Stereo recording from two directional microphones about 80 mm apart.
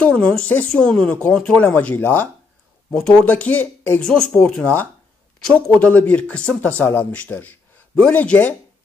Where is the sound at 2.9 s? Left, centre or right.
Centre.